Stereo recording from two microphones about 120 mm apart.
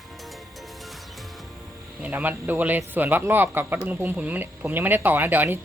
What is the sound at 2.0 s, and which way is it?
Speech, 15° right (ahead or behind).